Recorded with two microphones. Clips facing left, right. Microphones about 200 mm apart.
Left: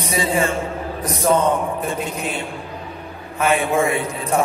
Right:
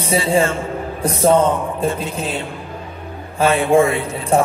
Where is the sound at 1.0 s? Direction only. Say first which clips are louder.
Right 4 dB; 30° right (ahead or behind).